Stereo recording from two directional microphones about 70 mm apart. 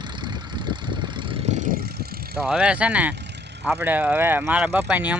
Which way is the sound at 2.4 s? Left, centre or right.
Centre.